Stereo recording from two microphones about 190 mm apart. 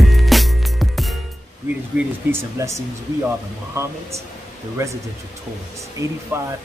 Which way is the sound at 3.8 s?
15° right (ahead or behind).